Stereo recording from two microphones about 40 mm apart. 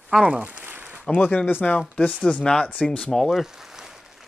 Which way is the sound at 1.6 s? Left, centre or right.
Left.